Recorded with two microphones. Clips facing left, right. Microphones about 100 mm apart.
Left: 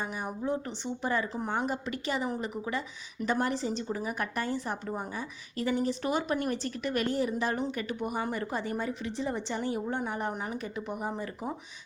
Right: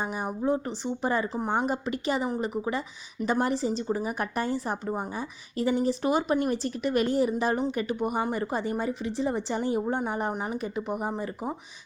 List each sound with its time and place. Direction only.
0.0 s a woman's voice: 20° right (ahead or behind)
3.2 s a woman's voice: 10° right (ahead or behind)
3.8 s a woman's voice: 20° right (ahead or behind)